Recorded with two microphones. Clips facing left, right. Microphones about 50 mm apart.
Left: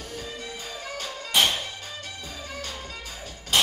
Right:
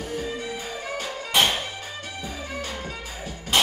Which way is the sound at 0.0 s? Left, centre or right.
Centre.